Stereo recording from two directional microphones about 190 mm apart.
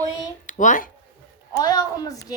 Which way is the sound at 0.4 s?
40° left (ahead or behind).